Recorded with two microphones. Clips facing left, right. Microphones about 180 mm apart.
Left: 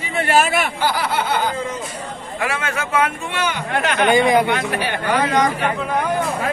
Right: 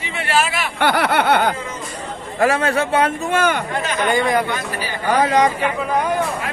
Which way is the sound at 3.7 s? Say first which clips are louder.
Left 2 dB; 65° left (ahead or behind).